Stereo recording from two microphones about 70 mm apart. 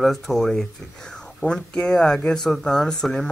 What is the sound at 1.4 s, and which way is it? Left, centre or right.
Speech, centre.